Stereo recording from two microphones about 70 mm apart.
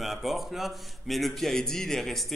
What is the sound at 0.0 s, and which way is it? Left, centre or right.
A man's voice, centre.